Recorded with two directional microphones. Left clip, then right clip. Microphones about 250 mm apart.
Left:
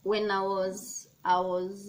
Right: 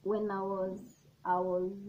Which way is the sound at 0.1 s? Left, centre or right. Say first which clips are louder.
Left 6 dB; left.